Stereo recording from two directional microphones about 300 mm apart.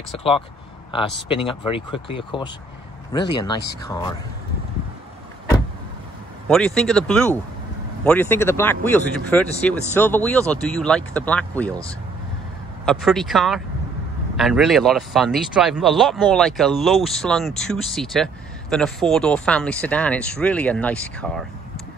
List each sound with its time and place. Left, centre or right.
1.3 s speech: centre
6.4 s speech: centre
12.8 s speech: centre